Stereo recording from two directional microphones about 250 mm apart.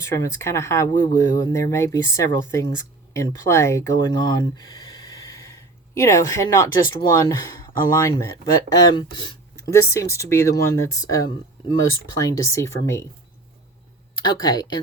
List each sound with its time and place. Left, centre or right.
0.0 s speech: centre
14.2 s speech: centre